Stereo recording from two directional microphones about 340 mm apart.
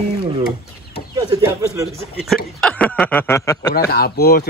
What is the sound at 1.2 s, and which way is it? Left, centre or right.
Speech, centre.